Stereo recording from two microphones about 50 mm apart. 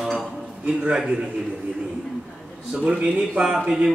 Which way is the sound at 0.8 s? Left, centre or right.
Centre.